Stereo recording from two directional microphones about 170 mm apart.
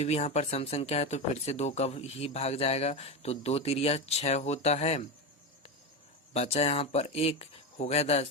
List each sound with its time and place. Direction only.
0.0 s speech: 40° left (ahead or behind)
6.3 s speech: 35° left (ahead or behind)